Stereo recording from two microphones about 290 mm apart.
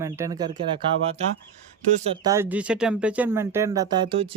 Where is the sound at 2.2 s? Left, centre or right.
Centre.